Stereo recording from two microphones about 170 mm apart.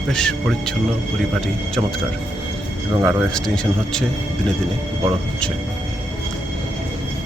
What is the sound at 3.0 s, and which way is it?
A man's voice, 5° left (ahead or behind).